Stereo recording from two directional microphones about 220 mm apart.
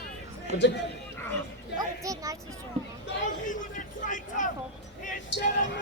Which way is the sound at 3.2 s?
35° left (ahead or behind).